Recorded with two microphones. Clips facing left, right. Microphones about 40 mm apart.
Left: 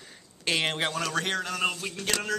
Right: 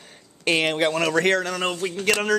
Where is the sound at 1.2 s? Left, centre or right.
Right.